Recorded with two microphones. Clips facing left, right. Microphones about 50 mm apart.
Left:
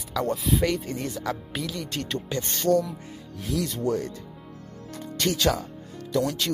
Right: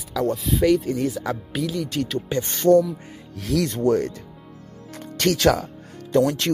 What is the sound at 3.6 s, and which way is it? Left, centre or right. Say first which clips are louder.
Speech: right 8 dB; right.